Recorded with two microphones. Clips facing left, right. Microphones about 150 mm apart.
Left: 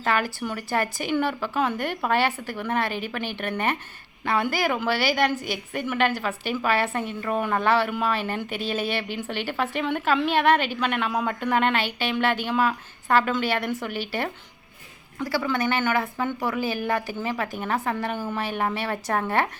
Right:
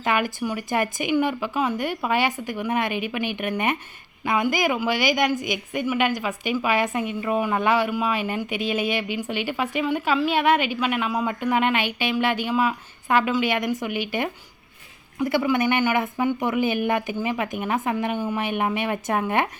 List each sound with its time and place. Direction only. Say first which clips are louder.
0.0 s speech: right 2 dB; 15° right (ahead or behind)